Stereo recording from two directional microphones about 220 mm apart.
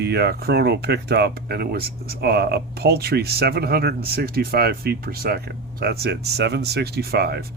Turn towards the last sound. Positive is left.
turn(degrees=-45)  # may be behind; listen again after turning